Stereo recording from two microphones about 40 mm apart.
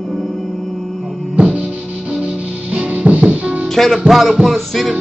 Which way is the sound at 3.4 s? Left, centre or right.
Right.